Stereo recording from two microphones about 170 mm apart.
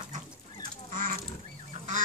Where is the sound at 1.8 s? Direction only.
40° right (ahead or behind).